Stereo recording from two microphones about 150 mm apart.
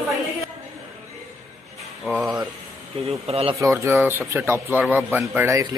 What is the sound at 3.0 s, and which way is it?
Speech, 40° right (ahead or behind).